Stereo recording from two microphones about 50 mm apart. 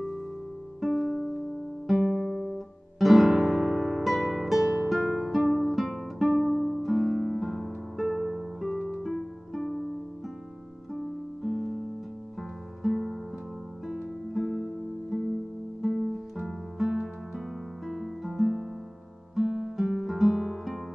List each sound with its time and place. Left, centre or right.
0.7 s music: centre
1.9 s guitar: centre
8.9 s harp: centre
10.9 s music: centre
14.3 s music: centre
19.4 s music: centre
19.8 s music: centre